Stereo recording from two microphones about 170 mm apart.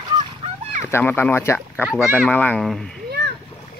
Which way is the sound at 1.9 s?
5° right (ahead or behind).